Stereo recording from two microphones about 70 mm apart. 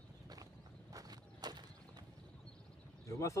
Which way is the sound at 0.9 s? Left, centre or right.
Right.